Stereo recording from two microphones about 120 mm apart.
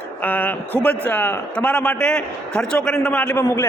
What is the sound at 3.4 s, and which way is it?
Speech, 20° left (ahead or behind).